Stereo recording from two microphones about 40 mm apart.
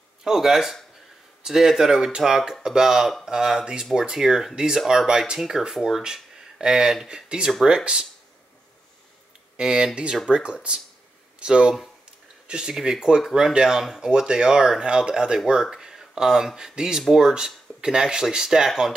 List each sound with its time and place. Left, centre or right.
0.2 s speech: centre
9.6 s speech: centre